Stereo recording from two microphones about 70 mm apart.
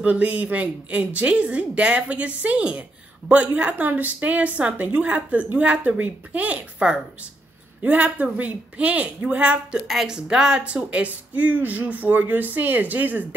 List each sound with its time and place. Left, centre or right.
0.0 s a woman's voice: centre